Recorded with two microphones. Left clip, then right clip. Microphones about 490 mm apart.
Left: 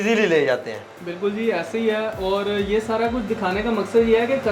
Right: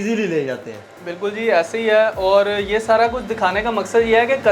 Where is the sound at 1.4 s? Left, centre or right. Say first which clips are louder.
Right 7 dB; right.